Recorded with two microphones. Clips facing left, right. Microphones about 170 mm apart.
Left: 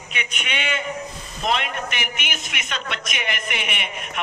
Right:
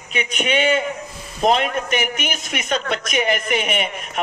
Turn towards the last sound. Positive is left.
turn(degrees=-40)  # may be behind; listen again after turning